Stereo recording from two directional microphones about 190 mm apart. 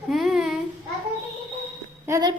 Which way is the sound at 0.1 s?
Centre (ahead or behind).